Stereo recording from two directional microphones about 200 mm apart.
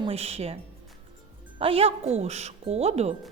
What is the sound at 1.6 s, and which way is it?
Speech, 30° right (ahead or behind).